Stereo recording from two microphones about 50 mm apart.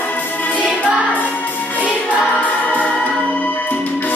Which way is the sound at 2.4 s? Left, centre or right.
Left.